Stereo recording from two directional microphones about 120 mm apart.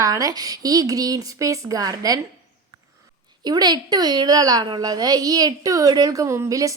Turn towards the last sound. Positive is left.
turn(degrees=-30)  # may be behind; listen again after turning